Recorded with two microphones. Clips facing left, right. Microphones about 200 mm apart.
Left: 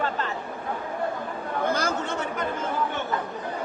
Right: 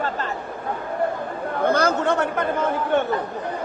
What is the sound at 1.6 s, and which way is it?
Chatter, 60° right (ahead or behind).